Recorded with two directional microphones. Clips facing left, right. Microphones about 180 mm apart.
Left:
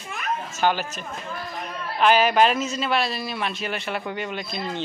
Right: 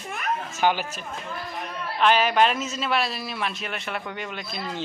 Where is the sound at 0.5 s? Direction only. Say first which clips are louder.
Left 1 dB; 10° right (ahead or behind).